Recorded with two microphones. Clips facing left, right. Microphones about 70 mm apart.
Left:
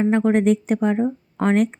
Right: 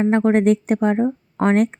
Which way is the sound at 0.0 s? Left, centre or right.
Right.